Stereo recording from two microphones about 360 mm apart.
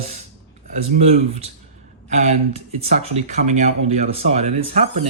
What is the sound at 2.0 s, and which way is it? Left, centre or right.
Speech, centre.